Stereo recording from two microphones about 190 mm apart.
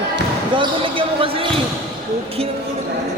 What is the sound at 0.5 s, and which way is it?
Basketball bounce, 25° right (ahead or behind).